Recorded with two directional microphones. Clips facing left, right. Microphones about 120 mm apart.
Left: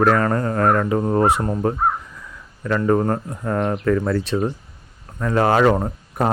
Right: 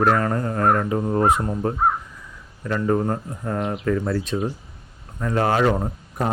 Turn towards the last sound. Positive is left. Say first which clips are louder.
# left 3 dB
turn(degrees=75)  # may be behind; listen again after turning